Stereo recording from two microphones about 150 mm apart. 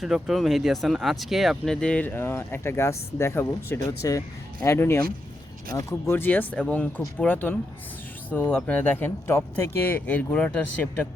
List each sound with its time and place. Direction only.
0.0 s speech: centre (ahead or behind)